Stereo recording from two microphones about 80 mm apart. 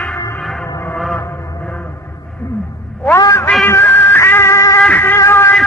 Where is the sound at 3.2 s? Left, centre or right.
Left.